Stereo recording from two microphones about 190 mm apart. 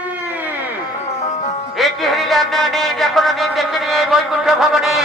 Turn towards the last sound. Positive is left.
turn(degrees=0)  # may be behind; listen again after turning